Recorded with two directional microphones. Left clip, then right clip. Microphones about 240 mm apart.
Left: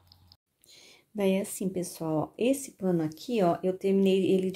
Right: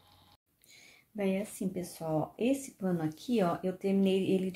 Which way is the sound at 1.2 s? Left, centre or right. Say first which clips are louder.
Left 6 dB; left.